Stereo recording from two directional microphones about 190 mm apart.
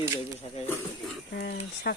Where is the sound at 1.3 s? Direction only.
55° left (ahead or behind).